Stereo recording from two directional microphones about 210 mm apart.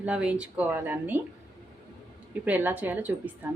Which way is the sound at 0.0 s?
5° right (ahead or behind).